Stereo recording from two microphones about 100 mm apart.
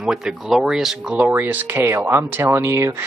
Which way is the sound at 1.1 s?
20° right (ahead or behind).